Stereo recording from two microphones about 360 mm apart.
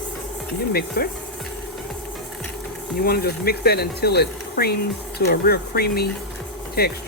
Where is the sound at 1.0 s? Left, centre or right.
Left.